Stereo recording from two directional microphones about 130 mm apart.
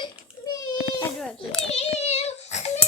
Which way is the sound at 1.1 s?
5° left (ahead or behind).